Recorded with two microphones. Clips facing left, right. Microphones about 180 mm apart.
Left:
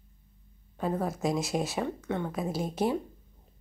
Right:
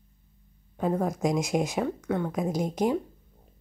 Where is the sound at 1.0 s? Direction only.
15° right (ahead or behind).